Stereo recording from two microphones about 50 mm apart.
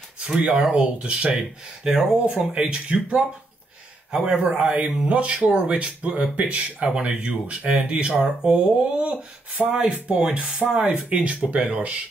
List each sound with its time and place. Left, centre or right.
0.4 s speech: centre
1.9 s speech: centre
10.6 s speech: centre
11.1 s speech: right